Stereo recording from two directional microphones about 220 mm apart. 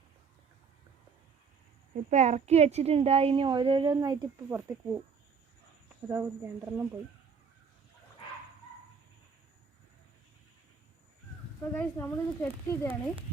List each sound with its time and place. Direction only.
2.0 s a woman's voice: 30° right (ahead or behind); by 5.0 s 10° right (ahead or behind)
6.1 s a woman's voice: 10° right (ahead or behind)
11.7 s speech: 10° left (ahead or behind)